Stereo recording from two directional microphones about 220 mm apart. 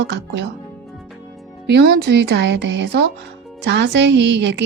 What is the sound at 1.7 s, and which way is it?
A woman's voice, 45° right (ahead or behind).